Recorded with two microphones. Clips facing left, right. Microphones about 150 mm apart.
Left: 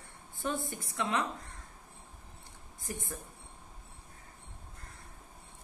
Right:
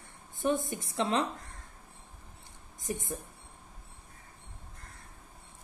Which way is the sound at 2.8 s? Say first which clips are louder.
Right 5 dB; 20° right (ahead or behind).